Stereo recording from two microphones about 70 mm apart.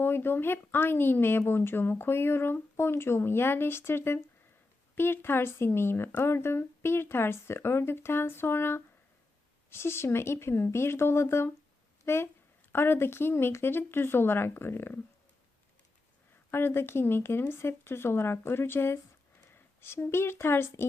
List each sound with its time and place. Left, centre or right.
0.0 s speech: left
16.5 s speech: left